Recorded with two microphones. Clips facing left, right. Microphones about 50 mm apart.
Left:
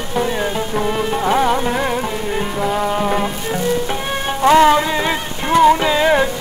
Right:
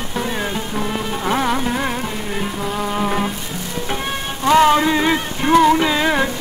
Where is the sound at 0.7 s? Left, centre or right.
Centre.